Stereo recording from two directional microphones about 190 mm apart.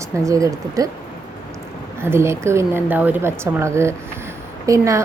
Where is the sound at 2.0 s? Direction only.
15° right (ahead or behind).